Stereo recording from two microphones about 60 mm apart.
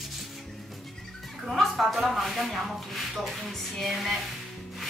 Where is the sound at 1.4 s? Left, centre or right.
Centre.